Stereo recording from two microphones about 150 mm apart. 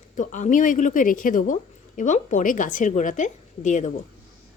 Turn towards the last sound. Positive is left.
turn(degrees=55)  # may be behind; listen again after turning